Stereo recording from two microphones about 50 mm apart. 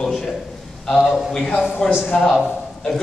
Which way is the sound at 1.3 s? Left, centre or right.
Centre.